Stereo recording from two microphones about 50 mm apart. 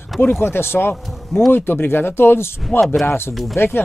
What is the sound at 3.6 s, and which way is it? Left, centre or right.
Speech, left.